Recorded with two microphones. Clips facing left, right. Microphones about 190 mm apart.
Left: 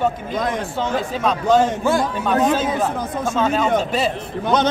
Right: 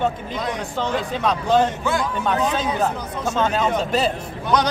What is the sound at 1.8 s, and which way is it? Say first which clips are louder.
A man's voice: left 3 dB; 45° left (ahead or behind).